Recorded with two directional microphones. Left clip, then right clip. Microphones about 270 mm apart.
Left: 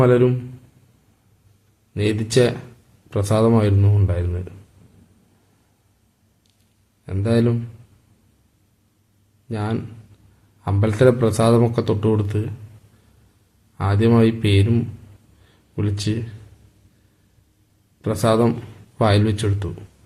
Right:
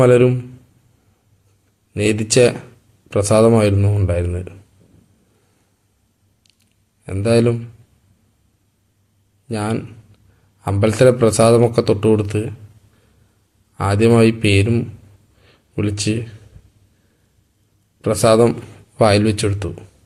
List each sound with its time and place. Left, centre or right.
0.0 s a man's voice: centre
1.9 s a man's voice: centre
7.0 s speech: centre
9.5 s a man's voice: centre
13.7 s a man's voice: centre
15.4 s a sound: centre
18.0 s a man's voice: centre